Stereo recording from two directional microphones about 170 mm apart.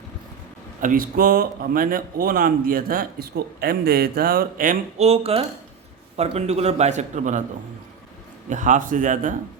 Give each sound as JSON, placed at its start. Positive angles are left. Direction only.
{"t": 0.8, "sound": "speech", "side_deg": -55}
{"t": 5.0, "sound": "a man's voice", "side_deg": -35}
{"t": 8.4, "sound": "a man's voice", "side_deg": -45}